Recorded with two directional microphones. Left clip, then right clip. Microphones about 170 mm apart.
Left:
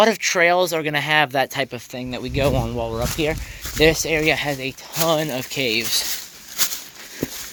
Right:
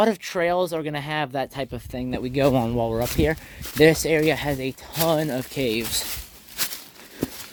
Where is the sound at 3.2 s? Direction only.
40° right (ahead or behind).